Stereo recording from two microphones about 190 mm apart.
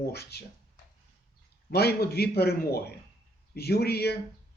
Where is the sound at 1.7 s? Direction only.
55° left (ahead or behind).